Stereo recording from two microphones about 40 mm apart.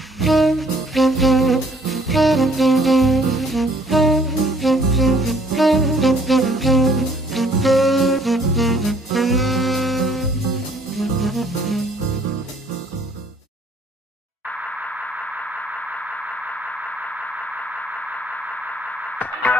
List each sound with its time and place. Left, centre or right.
0.2 s saxophone: centre
11.0 s music: centre
19.1 s music: left